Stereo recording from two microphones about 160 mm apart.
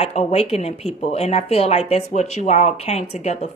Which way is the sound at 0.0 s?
40° left (ahead or behind).